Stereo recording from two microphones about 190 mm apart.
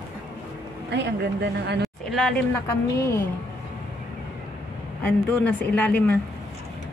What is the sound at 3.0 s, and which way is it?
Speech, 15° left (ahead or behind).